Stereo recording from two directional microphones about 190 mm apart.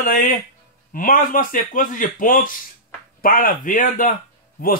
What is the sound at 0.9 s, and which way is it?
A man's voice, 45° left (ahead or behind).